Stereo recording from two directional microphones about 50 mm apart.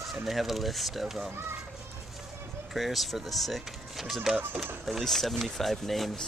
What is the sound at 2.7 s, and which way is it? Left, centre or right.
Speech, centre.